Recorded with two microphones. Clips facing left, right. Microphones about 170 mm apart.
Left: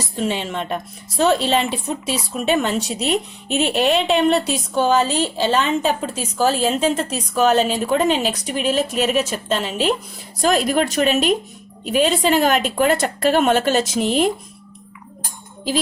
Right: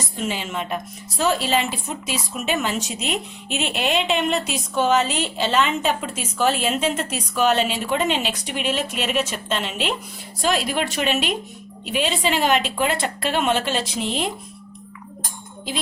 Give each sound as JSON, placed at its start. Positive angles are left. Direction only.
{"t": 0.2, "sound": "speech", "side_deg": 30}